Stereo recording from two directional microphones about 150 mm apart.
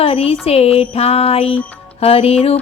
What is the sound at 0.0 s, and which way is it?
Music, 40° left (ahead or behind).